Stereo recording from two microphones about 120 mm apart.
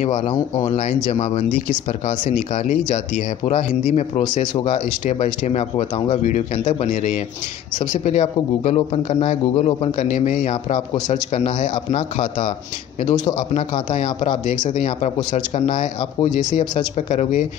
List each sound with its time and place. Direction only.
0.0 s speech: 75° left (ahead or behind)
1.1 s speech: 60° left (ahead or behind); by 3.6 s 80° left
3.8 s speech: 70° left (ahead or behind)
4.6 s a man's voice: 90° left
5.2 s speech: 65° left (ahead or behind); by 7.2 s 90° left
7.9 s speech: 70° left (ahead or behind); by 9.8 s 55° left (ahead or behind)
9.9 s a man's voice: 85° left
11.7 s a man's voice: 55° left (ahead or behind)
13.1 s a man's voice: 35° left (ahead or behind)
13.4 s speech: 55° left (ahead or behind); by 17.5 s 80° left